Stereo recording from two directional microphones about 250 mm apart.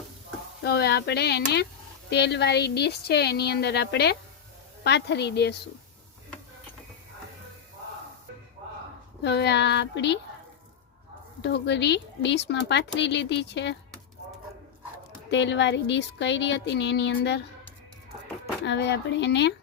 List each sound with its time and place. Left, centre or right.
0.6 s speech: left
9.2 s speech: left
11.4 s speech: left
15.3 s speech: left
18.6 s speech: left